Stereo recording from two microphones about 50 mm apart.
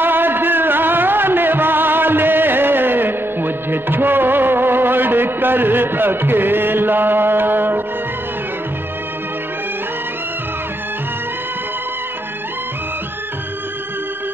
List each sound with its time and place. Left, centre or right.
0.0 s music: right